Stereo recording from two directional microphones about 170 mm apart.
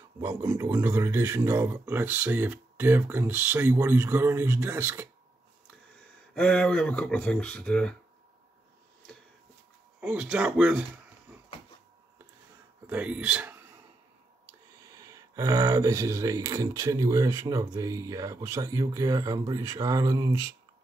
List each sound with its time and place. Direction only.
0.2 s speech: 15° right (ahead or behind)
6.3 s speech: 5° left (ahead or behind)
9.9 s speech: 5° right (ahead or behind)
12.8 s speech: 10° right (ahead or behind)
15.0 s speech: 20° right (ahead or behind)